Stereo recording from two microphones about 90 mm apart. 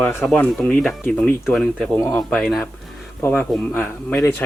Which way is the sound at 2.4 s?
Centre (ahead or behind).